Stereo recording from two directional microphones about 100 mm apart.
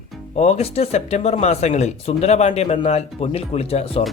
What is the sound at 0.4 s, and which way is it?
Speech, 90° left.